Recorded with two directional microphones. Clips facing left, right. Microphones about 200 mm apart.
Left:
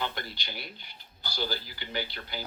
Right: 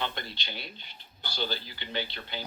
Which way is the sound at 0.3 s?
25° right (ahead or behind).